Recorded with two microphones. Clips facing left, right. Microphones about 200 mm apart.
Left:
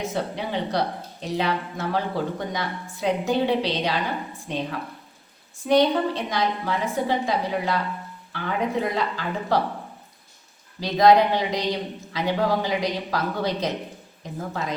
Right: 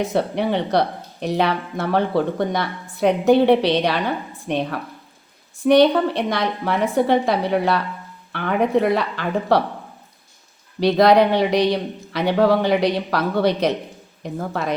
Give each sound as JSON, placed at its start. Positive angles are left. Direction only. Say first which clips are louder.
{"t": 0.1, "sound": "a man's voice", "louder": "right 7 dB", "side_deg": -65}
{"t": 10.8, "sound": "a man's voice", "louder": "right 3 dB", "side_deg": -70}